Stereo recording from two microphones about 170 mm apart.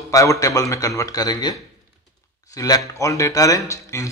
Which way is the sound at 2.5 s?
20° left (ahead or behind).